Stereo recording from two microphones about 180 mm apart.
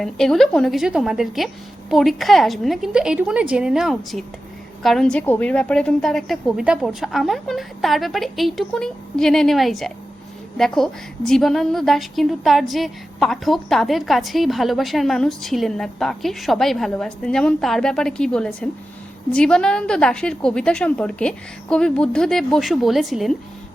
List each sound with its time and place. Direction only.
0.0 s a woman's voice: centre (ahead or behind)